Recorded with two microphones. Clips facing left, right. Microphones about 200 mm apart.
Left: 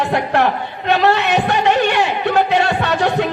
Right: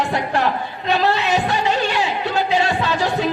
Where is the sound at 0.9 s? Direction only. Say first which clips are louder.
Left 3 dB; 65° left (ahead or behind).